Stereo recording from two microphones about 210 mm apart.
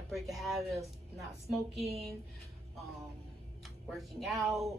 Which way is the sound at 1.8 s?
30° right (ahead or behind).